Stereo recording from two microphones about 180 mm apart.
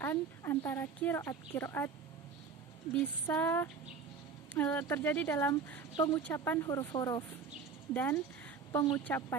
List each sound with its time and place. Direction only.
0.0 s a woman's voice: 15° left (ahead or behind)
2.9 s a woman's voice: 10° left (ahead or behind)